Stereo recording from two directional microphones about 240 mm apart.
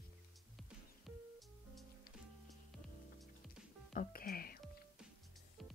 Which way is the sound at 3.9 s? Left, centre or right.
Left.